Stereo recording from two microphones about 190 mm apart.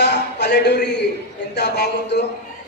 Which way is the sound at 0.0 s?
65° left (ahead or behind).